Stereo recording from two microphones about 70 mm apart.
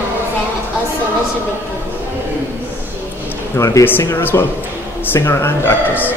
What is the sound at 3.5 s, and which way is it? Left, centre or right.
Speech, left.